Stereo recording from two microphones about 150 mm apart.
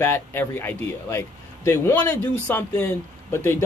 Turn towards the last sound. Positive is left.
turn(degrees=15)  # may be behind; listen again after turning